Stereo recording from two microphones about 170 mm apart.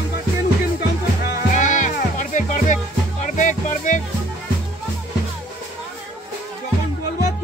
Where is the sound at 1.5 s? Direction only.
45° left (ahead or behind).